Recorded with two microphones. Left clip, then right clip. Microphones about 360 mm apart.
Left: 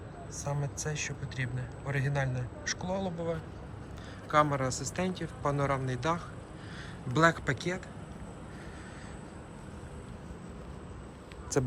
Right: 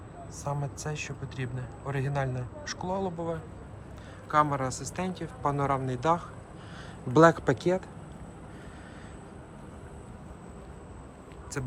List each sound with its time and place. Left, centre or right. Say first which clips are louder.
0.3 s a man's voice: right 2 dB; centre
11.5 s speech: left 7 dB; centre